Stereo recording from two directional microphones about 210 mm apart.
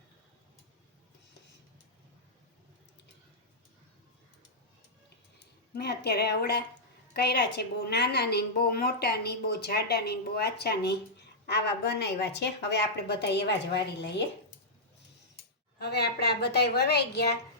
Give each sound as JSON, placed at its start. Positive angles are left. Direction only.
{"t": 5.7, "sound": "a woman's voice", "side_deg": 50}
{"t": 15.8, "sound": "a woman's voice", "side_deg": 50}